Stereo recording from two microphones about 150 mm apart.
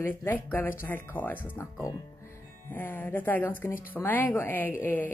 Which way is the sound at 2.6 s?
10° left (ahead or behind).